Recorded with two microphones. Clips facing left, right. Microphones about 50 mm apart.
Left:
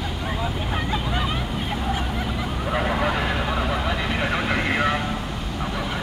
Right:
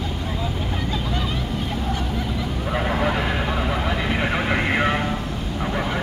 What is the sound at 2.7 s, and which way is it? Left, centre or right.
Vehicle, centre.